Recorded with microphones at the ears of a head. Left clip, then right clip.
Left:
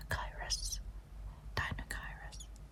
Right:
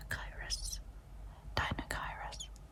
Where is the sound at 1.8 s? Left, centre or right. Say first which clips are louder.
Right 5 dB; right.